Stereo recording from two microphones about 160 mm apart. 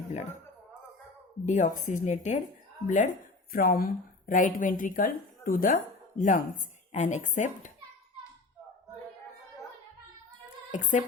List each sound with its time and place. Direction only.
0.1 s speech: 50° left (ahead or behind)
1.5 s speech: 50° left (ahead or behind)
3.5 s a woman's voice: 65° left (ahead or behind)
10.7 s speech: 50° left (ahead or behind)